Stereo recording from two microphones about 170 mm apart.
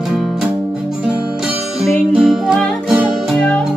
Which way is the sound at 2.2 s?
5° right (ahead or behind).